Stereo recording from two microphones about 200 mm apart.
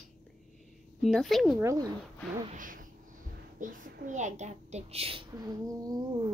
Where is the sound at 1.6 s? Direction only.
15° right (ahead or behind).